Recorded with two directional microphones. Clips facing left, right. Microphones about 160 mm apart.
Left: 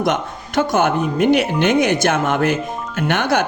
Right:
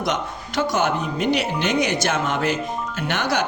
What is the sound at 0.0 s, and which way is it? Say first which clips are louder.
Speech: left 5 dB; 50° left (ahead or behind).